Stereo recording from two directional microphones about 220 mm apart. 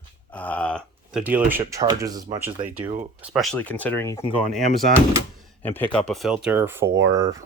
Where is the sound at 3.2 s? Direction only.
Centre (ahead or behind).